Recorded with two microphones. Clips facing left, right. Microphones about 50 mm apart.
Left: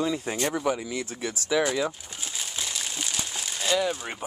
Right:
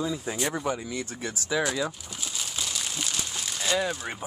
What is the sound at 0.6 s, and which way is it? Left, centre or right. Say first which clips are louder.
Speech: left 3 dB; left.